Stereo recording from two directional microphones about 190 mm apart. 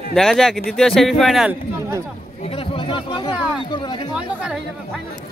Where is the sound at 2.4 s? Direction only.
30° left (ahead or behind).